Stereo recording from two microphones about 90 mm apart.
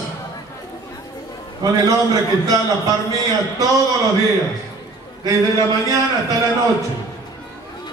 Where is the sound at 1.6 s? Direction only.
40° right (ahead or behind).